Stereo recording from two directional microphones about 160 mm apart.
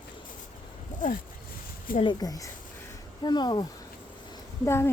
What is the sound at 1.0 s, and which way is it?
Speech, 55° left (ahead or behind).